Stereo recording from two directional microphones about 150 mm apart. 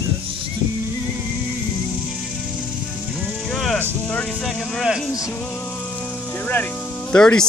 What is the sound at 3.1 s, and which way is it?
Music, 5° left (ahead or behind).